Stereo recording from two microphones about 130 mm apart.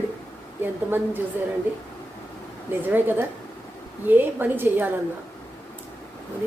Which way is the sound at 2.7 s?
15° right (ahead or behind).